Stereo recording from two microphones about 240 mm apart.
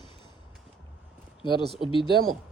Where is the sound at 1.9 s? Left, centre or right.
Left.